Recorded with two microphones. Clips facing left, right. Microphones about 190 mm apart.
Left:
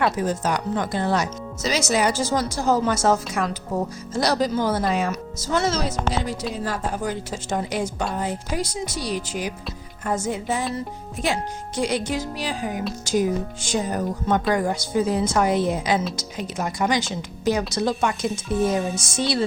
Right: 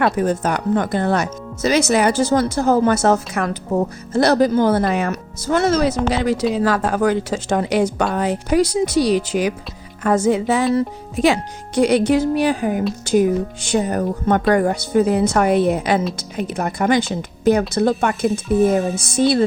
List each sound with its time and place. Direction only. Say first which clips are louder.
0.0 s speech: right 5 dB; 55° right (ahead or behind); by 9.6 s 75° right (ahead or behind)
10.0 s speech: right 9 dB; 90° right; by 19.5 s 55° right (ahead or behind)